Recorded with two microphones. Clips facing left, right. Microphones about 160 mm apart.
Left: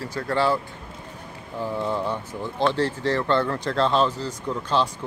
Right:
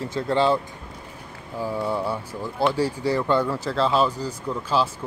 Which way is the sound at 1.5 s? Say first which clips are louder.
Right 1 dB; 10° right (ahead or behind).